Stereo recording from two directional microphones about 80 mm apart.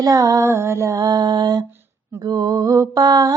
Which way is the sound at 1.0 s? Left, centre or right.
Right.